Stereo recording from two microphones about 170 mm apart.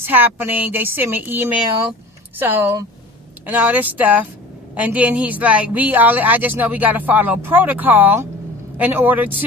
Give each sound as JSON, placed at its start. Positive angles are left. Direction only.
{"t": 0.0, "sound": "a woman's voice", "side_deg": -10}